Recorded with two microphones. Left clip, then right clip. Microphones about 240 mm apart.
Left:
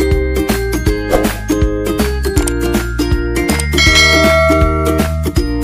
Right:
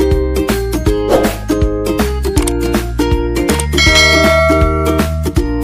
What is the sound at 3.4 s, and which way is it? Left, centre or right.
Music, centre.